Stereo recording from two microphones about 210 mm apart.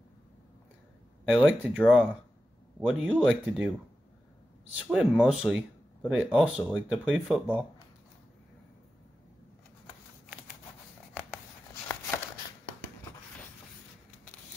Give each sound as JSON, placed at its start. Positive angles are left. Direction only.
{"t": 1.3, "sound": "speech", "side_deg": 5}
{"t": 4.8, "sound": "speech", "side_deg": 0}